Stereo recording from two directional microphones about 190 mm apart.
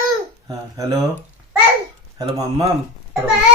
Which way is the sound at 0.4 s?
20° right (ahead or behind).